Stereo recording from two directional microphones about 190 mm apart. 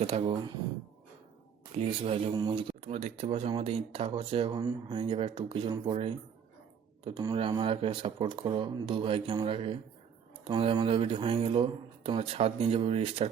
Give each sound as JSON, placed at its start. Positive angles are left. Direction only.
{"t": 0.0, "sound": "speech", "side_deg": -30}
{"t": 1.7, "sound": "speech", "side_deg": -30}